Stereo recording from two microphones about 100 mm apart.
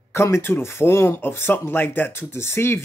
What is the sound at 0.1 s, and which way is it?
Speech, 25° left (ahead or behind).